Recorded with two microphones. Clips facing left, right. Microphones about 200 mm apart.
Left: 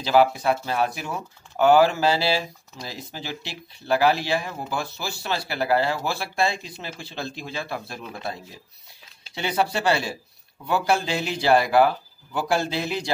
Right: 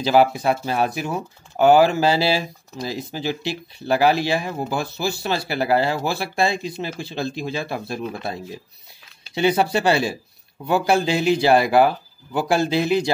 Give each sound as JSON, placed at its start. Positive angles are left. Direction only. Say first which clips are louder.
{"t": 0.0, "sound": "speech", "louder": "right 2 dB", "side_deg": -15}